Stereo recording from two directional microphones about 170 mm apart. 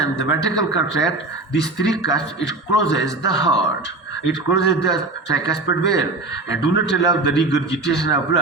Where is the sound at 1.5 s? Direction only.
90° left.